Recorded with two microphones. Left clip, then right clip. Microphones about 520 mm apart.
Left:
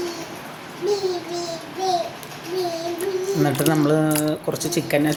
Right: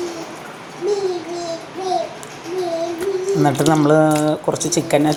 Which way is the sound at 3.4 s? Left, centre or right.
Left.